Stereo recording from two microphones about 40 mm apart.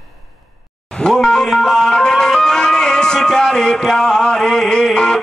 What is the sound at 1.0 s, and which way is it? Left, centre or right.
Music, centre.